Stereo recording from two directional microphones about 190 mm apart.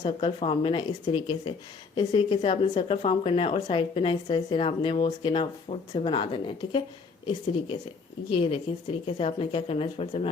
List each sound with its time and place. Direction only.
0.0 s speech: 25° left (ahead or behind)
8.3 s speech: 30° left (ahead or behind)